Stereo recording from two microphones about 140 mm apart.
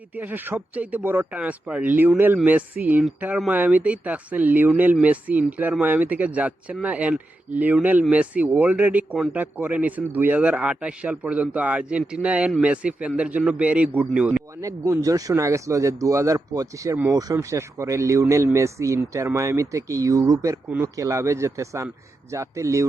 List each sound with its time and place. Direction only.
0.2 s speech: 15° right (ahead or behind)
14.6 s speech: 25° right (ahead or behind)